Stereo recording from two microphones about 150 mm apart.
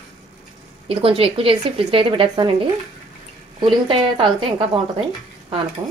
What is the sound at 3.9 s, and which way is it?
Speech, 35° right (ahead or behind).